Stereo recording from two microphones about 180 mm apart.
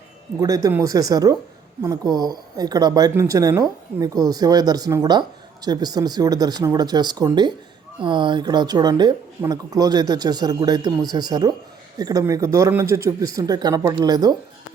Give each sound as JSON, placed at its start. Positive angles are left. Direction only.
{"t": 0.3, "sound": "speech", "side_deg": -20}